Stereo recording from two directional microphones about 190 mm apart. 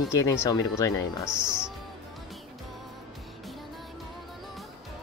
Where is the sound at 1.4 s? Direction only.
5° right (ahead or behind).